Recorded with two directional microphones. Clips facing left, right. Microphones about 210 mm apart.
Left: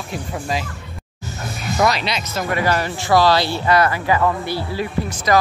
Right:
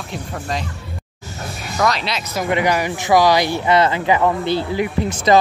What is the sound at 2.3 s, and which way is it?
Speech, 15° right (ahead or behind).